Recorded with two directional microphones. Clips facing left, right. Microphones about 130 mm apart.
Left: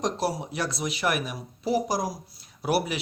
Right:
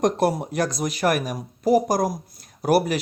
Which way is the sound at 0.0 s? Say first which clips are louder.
Right 7 dB; 55° right (ahead or behind).